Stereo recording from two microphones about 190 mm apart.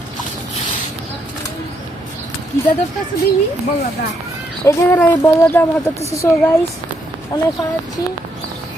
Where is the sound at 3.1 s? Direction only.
55° left (ahead or behind).